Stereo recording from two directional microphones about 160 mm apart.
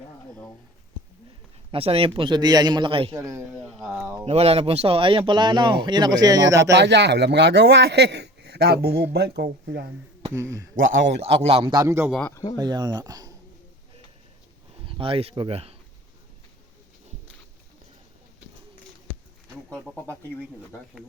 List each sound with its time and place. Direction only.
1.7 s a man's voice: 35° right (ahead or behind)
3.2 s speech: 20° right (ahead or behind)
3.5 s speech: centre (ahead or behind)
3.9 s a man's voice: 15° right (ahead or behind)
4.3 s speech: 40° right (ahead or behind); by 6.7 s 20° right (ahead or behind)
6.7 s speech: 90° right
10.3 s a man's voice: 20° right (ahead or behind)
11.2 s a man's voice: 40° right (ahead or behind)
11.7 s a man's voice: 20° right (ahead or behind)
12.3 s speech: 20° left (ahead or behind)
12.5 s speech: 25° right (ahead or behind)
14.8 s a man's voice: 35° right (ahead or behind)